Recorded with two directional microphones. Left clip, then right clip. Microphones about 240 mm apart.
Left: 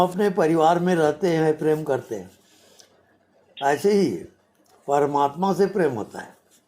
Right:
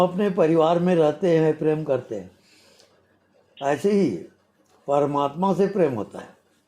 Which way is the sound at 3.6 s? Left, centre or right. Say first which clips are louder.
Left 3 dB; left.